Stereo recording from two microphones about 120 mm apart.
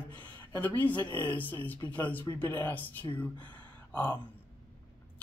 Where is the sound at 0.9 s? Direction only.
40° left (ahead or behind).